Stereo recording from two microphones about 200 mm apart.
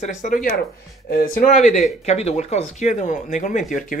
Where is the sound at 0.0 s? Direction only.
40° left (ahead or behind).